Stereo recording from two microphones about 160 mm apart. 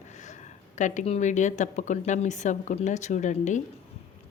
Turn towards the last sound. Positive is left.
turn(degrees=50)  # may be behind; listen again after turning